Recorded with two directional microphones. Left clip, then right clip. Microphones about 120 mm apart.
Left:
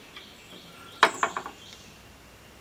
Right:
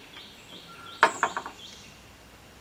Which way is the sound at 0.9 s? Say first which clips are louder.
Even; 15° left (ahead or behind).